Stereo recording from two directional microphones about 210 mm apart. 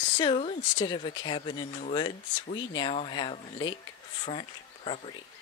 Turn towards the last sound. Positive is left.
turn(degrees=25)  # may be behind; listen again after turning